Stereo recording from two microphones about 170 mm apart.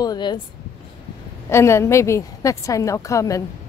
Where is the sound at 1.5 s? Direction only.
15° left (ahead or behind).